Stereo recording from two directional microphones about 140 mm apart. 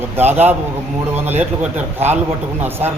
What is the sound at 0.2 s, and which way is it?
Speech, 15° right (ahead or behind).